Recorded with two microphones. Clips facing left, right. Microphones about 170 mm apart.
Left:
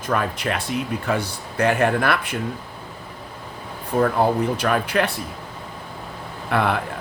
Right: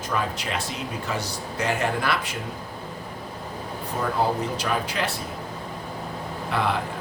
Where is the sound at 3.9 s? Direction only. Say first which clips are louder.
Left 6 dB; 60° left (ahead or behind).